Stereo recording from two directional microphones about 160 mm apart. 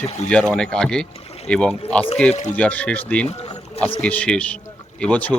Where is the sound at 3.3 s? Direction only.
40° left (ahead or behind).